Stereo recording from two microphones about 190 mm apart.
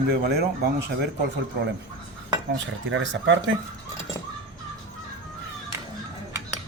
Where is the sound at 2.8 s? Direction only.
75° right (ahead or behind).